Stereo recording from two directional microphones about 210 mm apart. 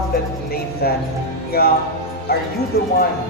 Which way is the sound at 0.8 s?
45° left (ahead or behind).